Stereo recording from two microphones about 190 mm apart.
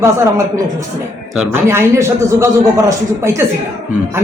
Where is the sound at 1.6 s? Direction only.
15° right (ahead or behind).